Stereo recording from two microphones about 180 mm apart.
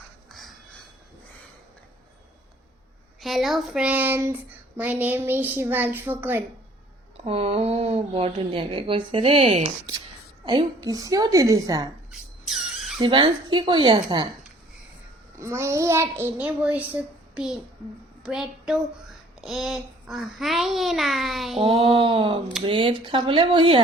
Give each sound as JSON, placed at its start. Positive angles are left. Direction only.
{"t": 0.3, "sound": "a sound", "side_deg": 0}
{"t": 3.2, "sound": "speech", "side_deg": 0}
{"t": 7.3, "sound": "a woman's voice", "side_deg": -30}
{"t": 12.5, "sound": "insect", "side_deg": 0}
{"t": 13.0, "sound": "a woman's voice", "side_deg": -25}
{"t": 15.4, "sound": "a woman's voice", "side_deg": -15}
{"t": 21.6, "sound": "a woman's voice", "side_deg": -30}